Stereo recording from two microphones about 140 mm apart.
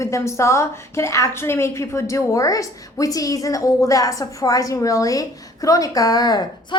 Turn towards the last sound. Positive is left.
turn(degrees=25)  # may be behind; listen again after turning